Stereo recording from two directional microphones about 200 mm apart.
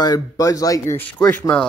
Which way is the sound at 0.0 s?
20° left (ahead or behind).